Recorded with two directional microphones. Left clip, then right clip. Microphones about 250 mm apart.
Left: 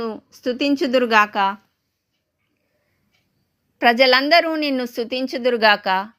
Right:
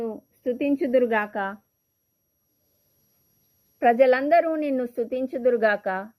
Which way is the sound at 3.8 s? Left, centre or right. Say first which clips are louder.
Left 4 dB; centre.